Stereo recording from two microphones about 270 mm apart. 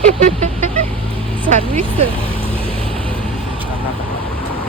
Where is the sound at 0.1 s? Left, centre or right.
Right.